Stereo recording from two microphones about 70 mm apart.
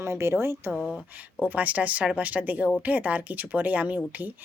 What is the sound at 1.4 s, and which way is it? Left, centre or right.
Speech, right.